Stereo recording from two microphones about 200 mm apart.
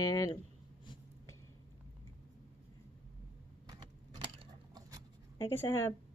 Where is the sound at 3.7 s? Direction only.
25° right (ahead or behind).